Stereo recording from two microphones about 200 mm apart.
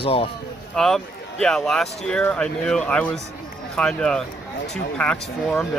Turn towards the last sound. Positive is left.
turn(degrees=5)  # may be behind; listen again after turning